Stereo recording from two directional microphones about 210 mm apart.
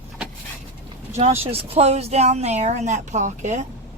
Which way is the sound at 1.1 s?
35° right (ahead or behind).